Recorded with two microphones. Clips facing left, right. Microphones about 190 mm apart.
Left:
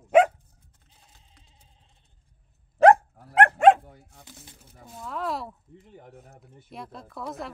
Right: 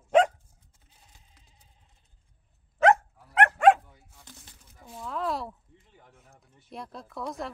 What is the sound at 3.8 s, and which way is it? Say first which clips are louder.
Dog: left 7 dB; 55° left (ahead or behind).